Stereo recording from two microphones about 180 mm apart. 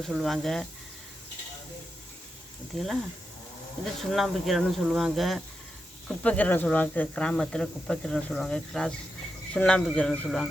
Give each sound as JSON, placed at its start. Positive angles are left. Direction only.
{"t": 0.0, "sound": "speech", "side_deg": 0}
{"t": 2.7, "sound": "speech", "side_deg": 0}
{"t": 4.1, "sound": "speech", "side_deg": 0}